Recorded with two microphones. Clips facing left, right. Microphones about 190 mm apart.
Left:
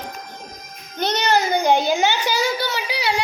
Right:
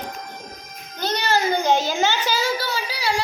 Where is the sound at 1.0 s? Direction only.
20° left (ahead or behind).